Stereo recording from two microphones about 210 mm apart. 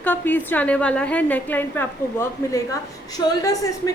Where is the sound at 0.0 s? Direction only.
10° left (ahead or behind).